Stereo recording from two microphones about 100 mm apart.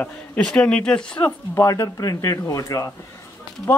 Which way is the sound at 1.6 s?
35° left (ahead or behind).